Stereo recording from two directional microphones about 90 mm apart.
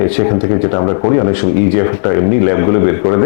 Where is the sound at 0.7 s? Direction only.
30° left (ahead or behind).